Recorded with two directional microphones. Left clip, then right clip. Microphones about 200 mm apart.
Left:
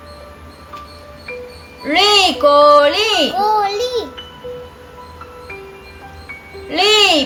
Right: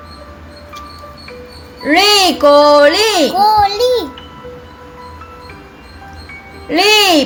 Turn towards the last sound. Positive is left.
turn(degrees=-20)  # may be behind; listen again after turning